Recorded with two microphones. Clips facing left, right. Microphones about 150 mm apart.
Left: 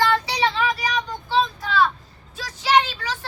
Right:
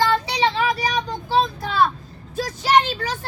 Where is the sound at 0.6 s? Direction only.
40° right (ahead or behind).